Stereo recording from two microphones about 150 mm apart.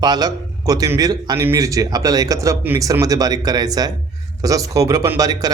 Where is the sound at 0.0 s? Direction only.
30° right (ahead or behind).